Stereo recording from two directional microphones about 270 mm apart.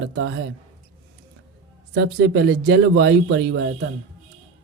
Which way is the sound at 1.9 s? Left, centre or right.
Right.